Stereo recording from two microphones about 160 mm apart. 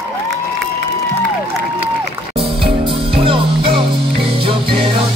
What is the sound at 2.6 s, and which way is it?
Music, 35° right (ahead or behind).